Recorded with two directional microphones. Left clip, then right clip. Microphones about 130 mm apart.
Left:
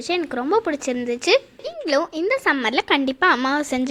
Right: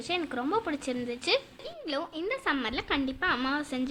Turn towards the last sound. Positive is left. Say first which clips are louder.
# left 10 dB
turn(degrees=60)  # may be behind; listen again after turning